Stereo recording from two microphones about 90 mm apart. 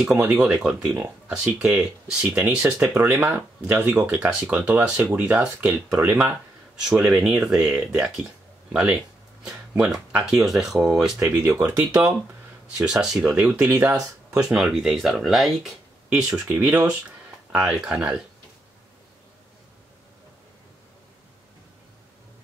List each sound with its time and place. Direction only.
0.3 s speech: 5° right (ahead or behind); by 4.0 s 25° right (ahead or behind)
4.0 s speech: 15° right (ahead or behind)
6.8 s speech: 5° right (ahead or behind)
11.1 s speech: 25° right (ahead or behind)
12.7 s speech: 10° right (ahead or behind)
13.7 s speech: 30° right (ahead or behind)
14.4 s speech: 5° right (ahead or behind)